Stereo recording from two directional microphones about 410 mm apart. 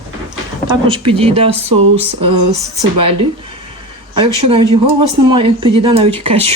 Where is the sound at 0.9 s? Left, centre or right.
Centre.